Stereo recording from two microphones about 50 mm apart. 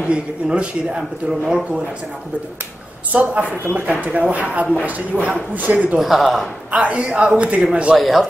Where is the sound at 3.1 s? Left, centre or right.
Right.